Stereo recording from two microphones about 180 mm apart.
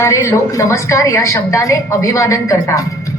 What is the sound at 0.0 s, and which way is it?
A woman's voice, 15° left (ahead or behind).